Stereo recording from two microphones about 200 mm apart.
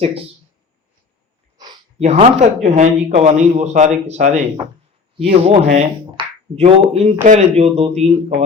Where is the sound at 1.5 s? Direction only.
20° right (ahead or behind).